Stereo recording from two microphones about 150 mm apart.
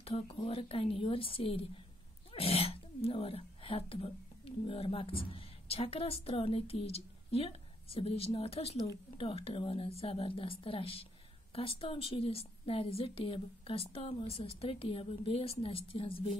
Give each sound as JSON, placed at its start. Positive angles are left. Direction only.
{"t": 0.0, "sound": "a woman's voice", "side_deg": 40}